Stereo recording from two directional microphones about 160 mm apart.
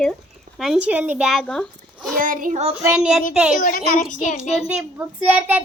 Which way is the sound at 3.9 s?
55° left (ahead or behind).